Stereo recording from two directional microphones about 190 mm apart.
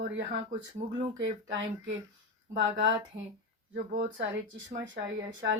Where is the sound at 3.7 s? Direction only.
50° right (ahead or behind).